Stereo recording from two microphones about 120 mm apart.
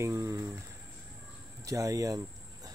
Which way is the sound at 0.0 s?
25° right (ahead or behind).